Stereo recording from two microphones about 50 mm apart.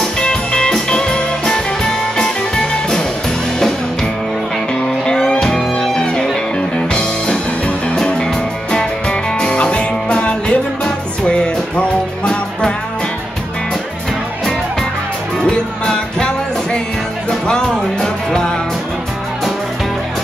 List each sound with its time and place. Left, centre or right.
0.2 s music: centre
15.4 s music: centre